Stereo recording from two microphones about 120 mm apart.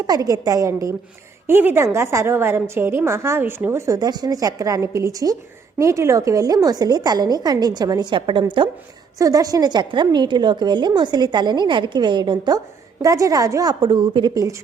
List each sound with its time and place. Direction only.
0.1 s a woman's voice: 30° right (ahead or behind)
9.1 s a woman's voice: 30° right (ahead or behind)